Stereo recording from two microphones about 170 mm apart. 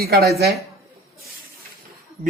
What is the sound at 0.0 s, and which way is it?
Speech, 65° right (ahead or behind).